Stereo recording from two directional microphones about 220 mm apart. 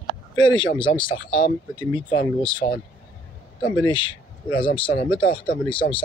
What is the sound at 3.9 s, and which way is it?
Speech, 20° left (ahead or behind).